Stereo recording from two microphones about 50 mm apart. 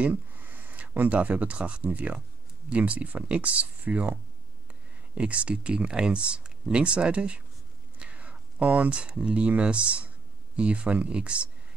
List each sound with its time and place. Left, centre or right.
0.0 s a sound: right
0.9 s speech: right
5.1 s speech: right